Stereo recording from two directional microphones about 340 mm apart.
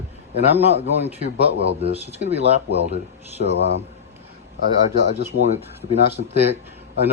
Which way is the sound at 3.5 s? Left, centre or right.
Left.